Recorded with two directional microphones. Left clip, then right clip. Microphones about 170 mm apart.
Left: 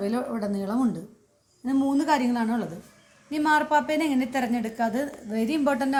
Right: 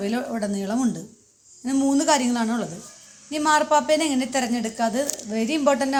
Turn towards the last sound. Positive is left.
turn(degrees=-10)  # may be behind; listen again after turning